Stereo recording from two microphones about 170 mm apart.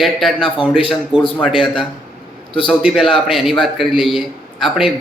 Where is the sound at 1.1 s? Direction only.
30° left (ahead or behind).